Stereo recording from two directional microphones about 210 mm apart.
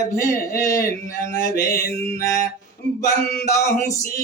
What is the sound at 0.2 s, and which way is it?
Mantra, 15° left (ahead or behind).